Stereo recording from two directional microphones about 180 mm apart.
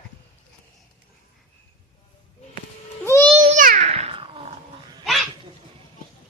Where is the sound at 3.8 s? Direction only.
35° right (ahead or behind).